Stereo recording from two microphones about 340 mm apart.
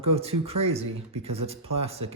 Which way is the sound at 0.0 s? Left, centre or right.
Centre.